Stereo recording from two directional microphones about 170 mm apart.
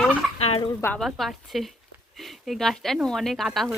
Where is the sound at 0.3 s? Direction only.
35° left (ahead or behind).